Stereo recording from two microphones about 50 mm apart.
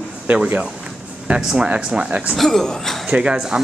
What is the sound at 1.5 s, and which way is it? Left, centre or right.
Speech, right.